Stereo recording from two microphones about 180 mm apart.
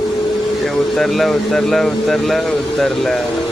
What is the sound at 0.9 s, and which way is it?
Speech, centre (ahead or behind).